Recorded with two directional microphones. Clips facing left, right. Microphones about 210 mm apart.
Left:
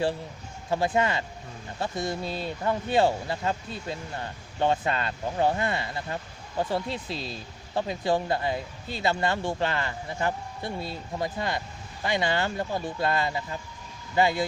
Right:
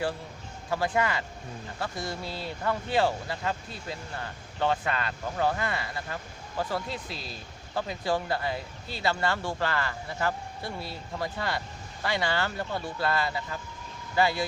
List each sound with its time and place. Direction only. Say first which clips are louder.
0.7 s speech: left 3 dB; 25° left (ahead or behind)